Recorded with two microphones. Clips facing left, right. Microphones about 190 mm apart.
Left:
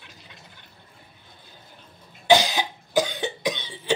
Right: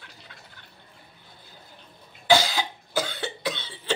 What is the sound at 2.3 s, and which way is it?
Cough, 20° left (ahead or behind).